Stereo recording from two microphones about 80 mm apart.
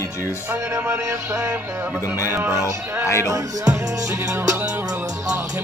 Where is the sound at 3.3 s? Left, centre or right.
Right.